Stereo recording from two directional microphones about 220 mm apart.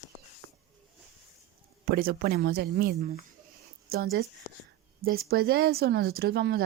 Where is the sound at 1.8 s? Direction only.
40° right (ahead or behind).